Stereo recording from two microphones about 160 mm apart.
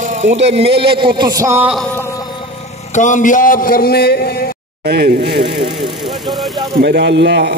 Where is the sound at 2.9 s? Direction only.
50° left (ahead or behind); by 4.4 s 75° left (ahead or behind).